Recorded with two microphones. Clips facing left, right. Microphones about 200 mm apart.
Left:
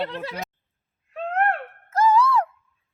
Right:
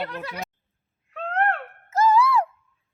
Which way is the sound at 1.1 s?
10° left (ahead or behind).